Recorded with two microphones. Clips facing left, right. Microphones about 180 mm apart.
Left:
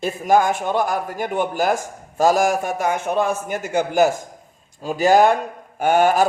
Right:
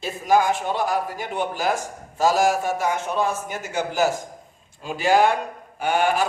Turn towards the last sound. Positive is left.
turn(degrees=45)  # may be behind; listen again after turning